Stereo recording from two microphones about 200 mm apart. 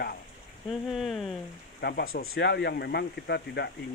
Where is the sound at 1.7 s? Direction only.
55° left (ahead or behind).